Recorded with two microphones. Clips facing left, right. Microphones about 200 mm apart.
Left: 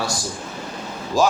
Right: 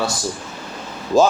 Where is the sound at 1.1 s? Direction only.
25° right (ahead or behind).